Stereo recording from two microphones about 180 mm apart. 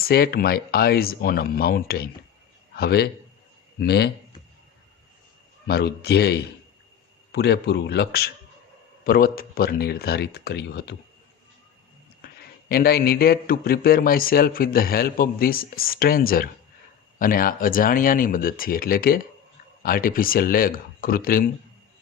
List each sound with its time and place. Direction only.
0.0 s a man's voice: 55° left (ahead or behind)
5.6 s a man's voice: 60° left (ahead or behind)
12.6 s a man's voice: 60° left (ahead or behind)